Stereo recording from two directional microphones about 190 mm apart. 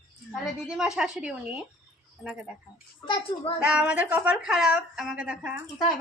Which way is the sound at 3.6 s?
5° right (ahead or behind).